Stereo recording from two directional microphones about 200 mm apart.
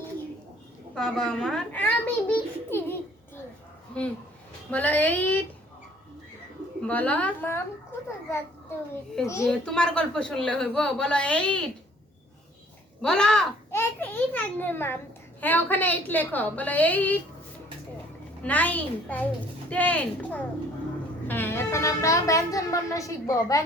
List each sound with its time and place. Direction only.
0.9 s speech: 5° left (ahead or behind)
4.7 s a woman's voice: 10° left (ahead or behind)
6.8 s a woman's voice: 5° left (ahead or behind)
9.2 s a woman's voice: 15° left (ahead or behind)
13.0 s a woman's voice: 5° left (ahead or behind)
18.4 s a woman's voice: 10° left (ahead or behind)